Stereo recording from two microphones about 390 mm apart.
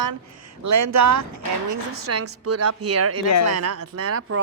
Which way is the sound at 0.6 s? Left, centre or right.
Right.